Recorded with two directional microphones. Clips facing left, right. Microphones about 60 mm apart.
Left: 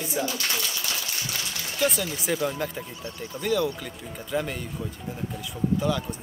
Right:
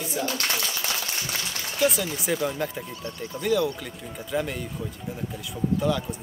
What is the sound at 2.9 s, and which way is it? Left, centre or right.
Speech, centre.